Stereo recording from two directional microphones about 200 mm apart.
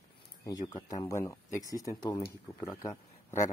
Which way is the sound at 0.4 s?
20° left (ahead or behind).